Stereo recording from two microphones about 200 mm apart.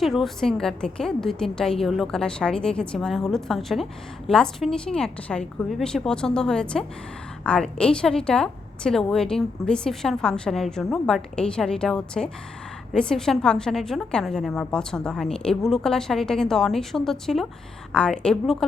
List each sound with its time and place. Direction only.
0.0 s a woman's voice: centre (ahead or behind)